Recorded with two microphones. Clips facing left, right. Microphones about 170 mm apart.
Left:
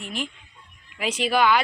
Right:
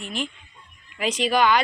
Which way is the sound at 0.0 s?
10° left (ahead or behind).